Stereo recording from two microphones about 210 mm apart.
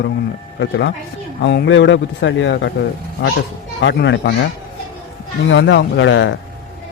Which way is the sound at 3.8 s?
55° left (ahead or behind).